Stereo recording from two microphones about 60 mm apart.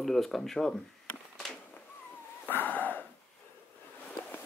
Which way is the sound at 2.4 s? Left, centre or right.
Left.